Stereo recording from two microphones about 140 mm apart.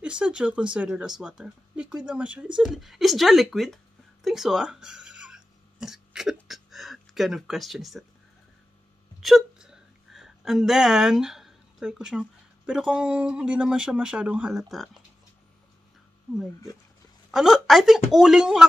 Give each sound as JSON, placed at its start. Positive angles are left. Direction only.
{"t": 0.0, "sound": "speech", "side_deg": -5}
{"t": 9.2, "sound": "speech", "side_deg": -5}
{"t": 17.3, "sound": "a woman's voice", "side_deg": -5}